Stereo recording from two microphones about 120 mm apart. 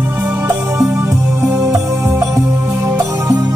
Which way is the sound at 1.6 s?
25° right (ahead or behind).